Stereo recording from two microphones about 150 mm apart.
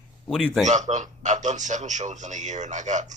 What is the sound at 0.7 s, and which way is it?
Speech, 55° right (ahead or behind).